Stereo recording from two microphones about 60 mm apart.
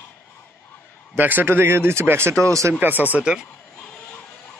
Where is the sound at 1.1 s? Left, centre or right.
Right.